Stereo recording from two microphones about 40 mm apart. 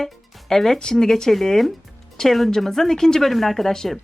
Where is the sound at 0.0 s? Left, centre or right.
Centre.